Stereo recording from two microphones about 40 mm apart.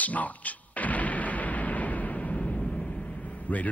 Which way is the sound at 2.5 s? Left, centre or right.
Centre.